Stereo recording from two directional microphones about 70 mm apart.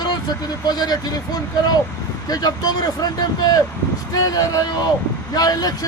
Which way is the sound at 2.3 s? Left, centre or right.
Left.